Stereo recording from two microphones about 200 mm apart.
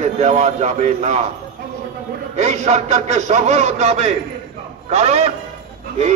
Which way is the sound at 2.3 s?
35° right (ahead or behind).